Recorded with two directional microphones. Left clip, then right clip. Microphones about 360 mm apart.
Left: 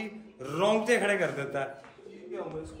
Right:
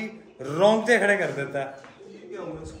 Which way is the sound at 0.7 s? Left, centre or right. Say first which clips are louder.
Right 6 dB; left.